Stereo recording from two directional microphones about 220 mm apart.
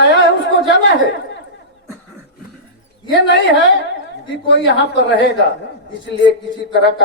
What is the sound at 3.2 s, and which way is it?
A woman's voice, 55° left (ahead or behind).